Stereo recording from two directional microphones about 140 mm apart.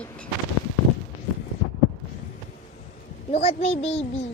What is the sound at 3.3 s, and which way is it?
Speech, 45° left (ahead or behind).